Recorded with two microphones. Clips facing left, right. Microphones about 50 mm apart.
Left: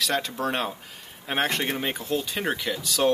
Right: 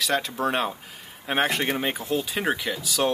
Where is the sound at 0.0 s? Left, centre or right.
Centre.